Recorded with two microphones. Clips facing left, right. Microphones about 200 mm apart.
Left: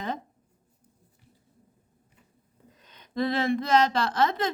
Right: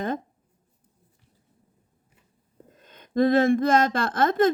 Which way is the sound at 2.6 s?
50° right (ahead or behind).